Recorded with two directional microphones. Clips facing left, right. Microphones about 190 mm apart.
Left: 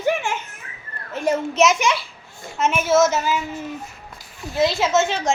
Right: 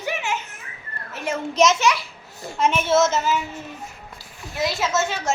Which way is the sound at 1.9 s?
25° left (ahead or behind).